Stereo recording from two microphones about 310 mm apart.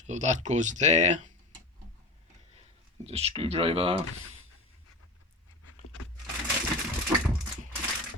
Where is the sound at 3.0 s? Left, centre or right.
Centre.